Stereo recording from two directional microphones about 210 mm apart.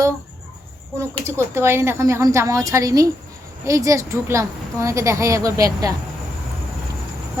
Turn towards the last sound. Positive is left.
turn(degrees=-15)  # may be behind; listen again after turning